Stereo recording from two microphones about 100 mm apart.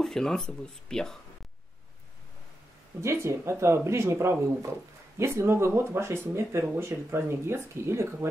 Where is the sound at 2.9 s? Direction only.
30° right (ahead or behind).